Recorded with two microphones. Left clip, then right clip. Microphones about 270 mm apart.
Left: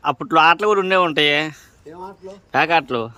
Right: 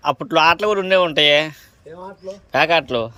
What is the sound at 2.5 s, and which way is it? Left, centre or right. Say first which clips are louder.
Speech: right 1 dB; centre.